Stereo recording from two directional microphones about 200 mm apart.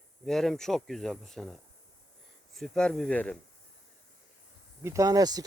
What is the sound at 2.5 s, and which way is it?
Speech, centre (ahead or behind).